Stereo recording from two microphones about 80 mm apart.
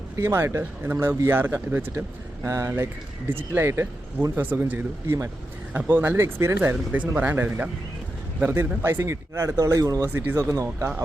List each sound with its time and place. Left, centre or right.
0.2 s speech: right
4.4 s speech: right
5.0 s speech: right
5.7 s speech: right
9.8 s speech: right
10.1 s speech: right
10.3 s speech: right